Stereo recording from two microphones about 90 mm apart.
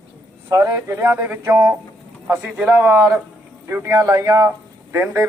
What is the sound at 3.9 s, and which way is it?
Speech, 40° right (ahead or behind).